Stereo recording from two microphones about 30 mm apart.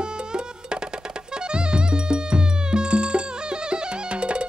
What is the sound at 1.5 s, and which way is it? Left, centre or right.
Music, right.